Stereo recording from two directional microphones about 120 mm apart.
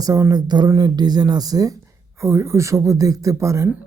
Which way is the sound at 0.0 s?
30° right (ahead or behind).